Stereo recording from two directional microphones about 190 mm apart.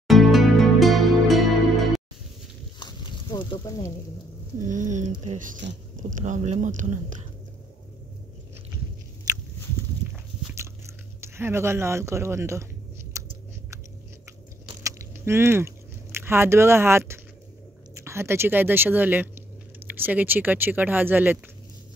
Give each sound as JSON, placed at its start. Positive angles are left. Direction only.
{"t": 0.1, "sound": "music", "side_deg": 0}
{"t": 2.8, "sound": "a sound", "side_deg": 25}
{"t": 4.6, "sound": "speech", "side_deg": -40}
{"t": 10.5, "sound": "biting", "side_deg": -15}
{"t": 13.1, "sound": "chewing", "side_deg": -15}
{"t": 14.8, "sound": "chewing", "side_deg": -15}
{"t": 17.9, "sound": "speech", "side_deg": -15}